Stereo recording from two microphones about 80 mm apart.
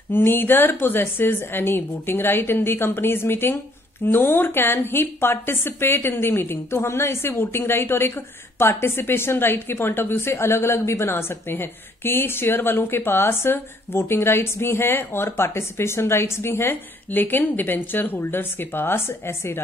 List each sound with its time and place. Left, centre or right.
0.1 s a woman's voice: left